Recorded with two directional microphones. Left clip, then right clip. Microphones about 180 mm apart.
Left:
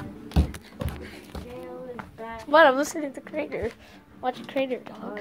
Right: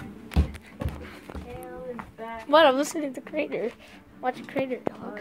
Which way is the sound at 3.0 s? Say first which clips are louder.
Right 1 dB; 25° right (ahead or behind).